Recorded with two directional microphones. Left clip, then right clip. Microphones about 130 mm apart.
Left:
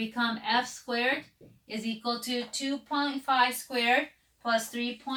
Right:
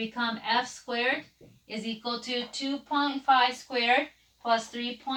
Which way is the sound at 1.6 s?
40° left (ahead or behind).